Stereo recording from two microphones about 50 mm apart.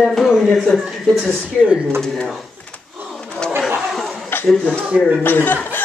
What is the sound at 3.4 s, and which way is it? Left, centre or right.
Chatter, centre.